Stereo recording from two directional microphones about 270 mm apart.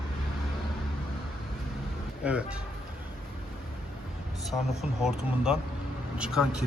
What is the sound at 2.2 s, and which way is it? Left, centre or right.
Speech, centre.